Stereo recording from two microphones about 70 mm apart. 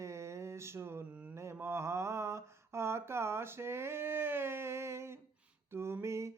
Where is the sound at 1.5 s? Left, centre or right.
Right.